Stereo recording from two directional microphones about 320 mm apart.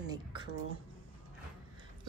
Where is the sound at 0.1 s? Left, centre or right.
Centre.